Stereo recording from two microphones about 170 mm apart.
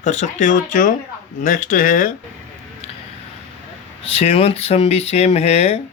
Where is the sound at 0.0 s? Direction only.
45° left (ahead or behind).